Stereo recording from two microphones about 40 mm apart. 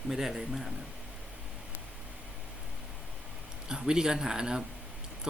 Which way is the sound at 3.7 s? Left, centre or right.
Centre.